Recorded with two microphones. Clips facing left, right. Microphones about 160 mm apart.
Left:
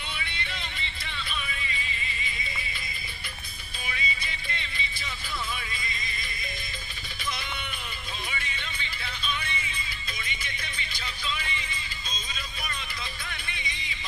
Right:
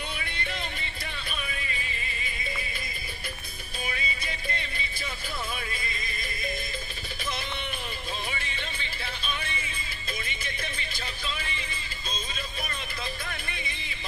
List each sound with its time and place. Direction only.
0.2 s music: 45° right (ahead or behind)
3.8 s music: 45° right (ahead or behind)
8.3 s music: 40° right (ahead or behind)